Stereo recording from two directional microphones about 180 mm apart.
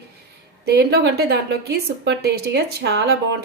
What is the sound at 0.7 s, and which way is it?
A woman's voice, 65° right (ahead or behind).